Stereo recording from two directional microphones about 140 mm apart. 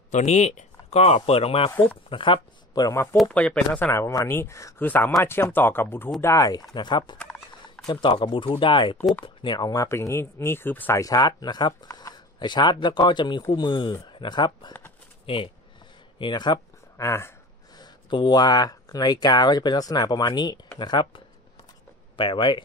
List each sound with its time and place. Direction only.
0.1 s speech: 55° left (ahead or behind); by 3.0 s 30° left (ahead or behind)
3.2 s speech: 10° left (ahead or behind)
3.9 s speech: 25° left (ahead or behind)
7.2 s a sound: 5° left (ahead or behind)
7.8 s speech: 35° left (ahead or behind); by 11.0 s 15° left (ahead or behind)
11.0 s speech: 25° left (ahead or behind)
16.9 s speech: 20° left (ahead or behind)
17.7 s speech: 30° left (ahead or behind)